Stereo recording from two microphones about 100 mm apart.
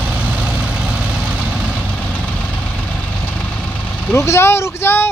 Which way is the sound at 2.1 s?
10° left (ahead or behind).